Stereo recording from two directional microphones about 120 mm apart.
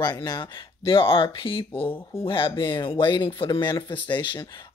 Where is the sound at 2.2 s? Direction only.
45° left (ahead or behind).